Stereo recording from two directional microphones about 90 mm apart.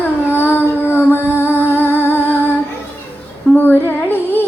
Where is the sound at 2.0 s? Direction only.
20° left (ahead or behind).